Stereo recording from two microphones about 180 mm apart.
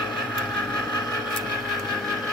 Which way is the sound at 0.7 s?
20° left (ahead or behind).